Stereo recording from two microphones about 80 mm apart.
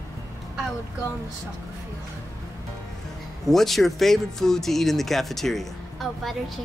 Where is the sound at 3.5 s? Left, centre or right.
Centre.